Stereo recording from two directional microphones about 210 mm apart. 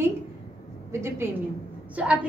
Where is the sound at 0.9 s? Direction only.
10° right (ahead or behind).